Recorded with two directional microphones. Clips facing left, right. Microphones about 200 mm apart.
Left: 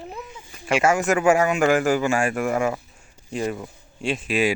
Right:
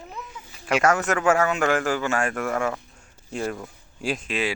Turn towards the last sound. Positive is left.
turn(degrees=5)  # may be behind; listen again after turning